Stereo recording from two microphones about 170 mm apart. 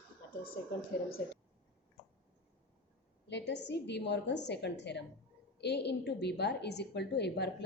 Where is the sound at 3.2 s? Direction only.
90° left.